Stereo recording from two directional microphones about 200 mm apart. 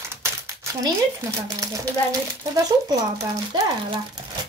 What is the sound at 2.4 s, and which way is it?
Speech, 20° right (ahead or behind).